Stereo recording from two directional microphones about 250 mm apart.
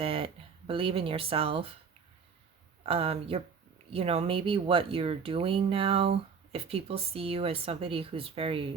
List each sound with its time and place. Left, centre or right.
0.0 s a sound: right
0.7 s speech: right
2.8 s speech: right